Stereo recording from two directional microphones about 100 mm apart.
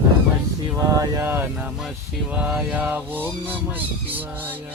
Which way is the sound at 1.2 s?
20° right (ahead or behind).